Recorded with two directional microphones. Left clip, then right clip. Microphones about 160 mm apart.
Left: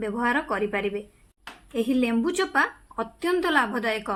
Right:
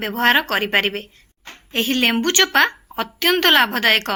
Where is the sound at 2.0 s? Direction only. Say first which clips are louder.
Right 9 dB; 20° right (ahead or behind).